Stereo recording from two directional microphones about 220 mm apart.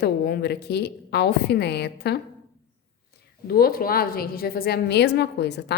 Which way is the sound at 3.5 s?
45° left (ahead or behind).